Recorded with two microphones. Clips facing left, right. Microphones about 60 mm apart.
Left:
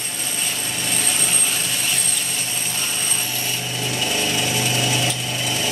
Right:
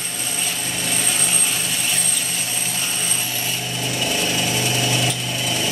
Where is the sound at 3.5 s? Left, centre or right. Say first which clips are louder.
Even; centre.